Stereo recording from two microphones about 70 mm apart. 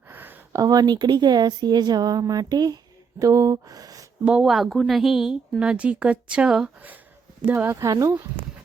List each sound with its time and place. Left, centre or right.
0.1 s a sound: right
0.6 s speech: right
3.2 s speech: right
4.4 s a woman's voice: centre
7.5 s speech: right
7.9 s speech: right